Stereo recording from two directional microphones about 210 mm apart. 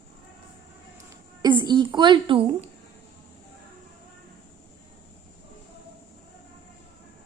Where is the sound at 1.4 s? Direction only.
20° right (ahead or behind).